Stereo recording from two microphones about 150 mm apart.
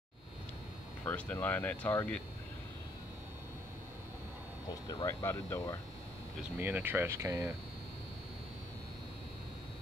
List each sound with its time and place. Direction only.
1.0 s speech: 10° left (ahead or behind)
4.8 s speech: 20° left (ahead or behind)
6.6 s speech: 15° right (ahead or behind)